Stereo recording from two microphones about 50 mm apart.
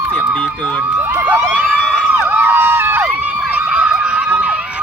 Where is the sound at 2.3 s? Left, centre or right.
Right.